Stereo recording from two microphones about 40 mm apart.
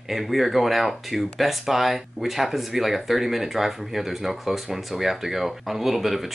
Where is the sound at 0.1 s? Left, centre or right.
Centre.